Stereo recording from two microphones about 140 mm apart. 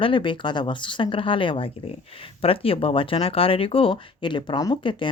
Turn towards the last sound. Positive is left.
turn(degrees=35)  # may be behind; listen again after turning